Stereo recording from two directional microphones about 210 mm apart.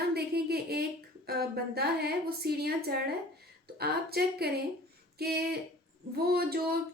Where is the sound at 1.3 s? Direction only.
50° right (ahead or behind).